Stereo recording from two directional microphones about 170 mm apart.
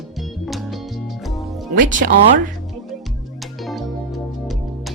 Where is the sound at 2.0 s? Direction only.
65° right (ahead or behind).